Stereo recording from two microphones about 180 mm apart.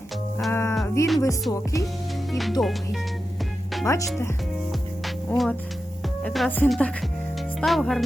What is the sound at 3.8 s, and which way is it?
Speech, 15° left (ahead or behind).